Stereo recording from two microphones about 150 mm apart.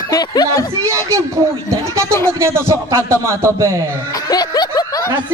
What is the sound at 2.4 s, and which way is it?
A man's voice, 15° right (ahead or behind).